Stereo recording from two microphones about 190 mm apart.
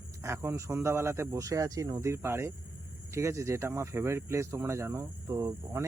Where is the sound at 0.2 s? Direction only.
15° right (ahead or behind).